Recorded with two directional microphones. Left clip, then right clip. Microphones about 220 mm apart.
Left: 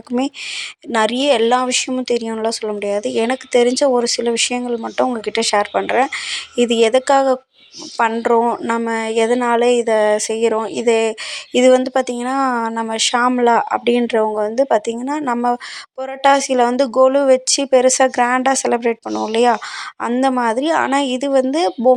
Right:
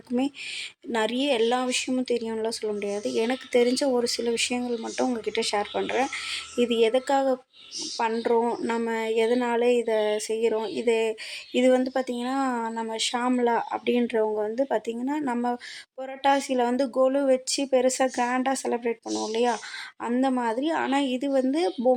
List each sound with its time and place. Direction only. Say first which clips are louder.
0.9 s a woman's voice: left 10 dB; 15° left (ahead or behind)